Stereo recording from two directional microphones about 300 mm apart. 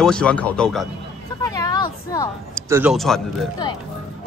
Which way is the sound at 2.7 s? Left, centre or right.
Centre.